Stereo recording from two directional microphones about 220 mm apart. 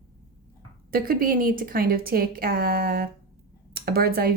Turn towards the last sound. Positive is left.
turn(degrees=-45)  # may be behind; listen again after turning